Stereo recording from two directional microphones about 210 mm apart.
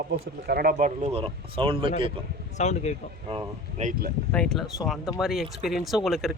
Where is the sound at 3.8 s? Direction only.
35° right (ahead or behind).